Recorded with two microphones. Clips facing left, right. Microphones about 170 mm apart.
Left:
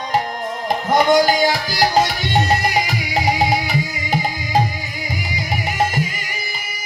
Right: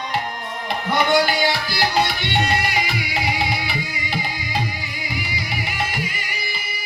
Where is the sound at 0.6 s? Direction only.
40° left (ahead or behind).